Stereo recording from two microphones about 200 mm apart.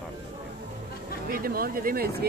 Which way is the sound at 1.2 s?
45° right (ahead or behind).